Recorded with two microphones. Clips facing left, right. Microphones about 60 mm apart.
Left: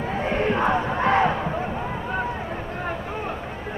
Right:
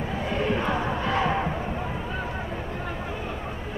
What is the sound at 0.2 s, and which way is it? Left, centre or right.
Crowd, left.